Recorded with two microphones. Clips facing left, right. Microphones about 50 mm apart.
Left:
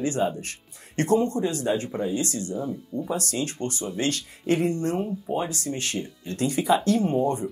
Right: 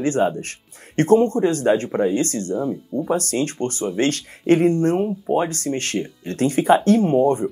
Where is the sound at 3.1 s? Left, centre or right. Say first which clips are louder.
Right 7 dB; right.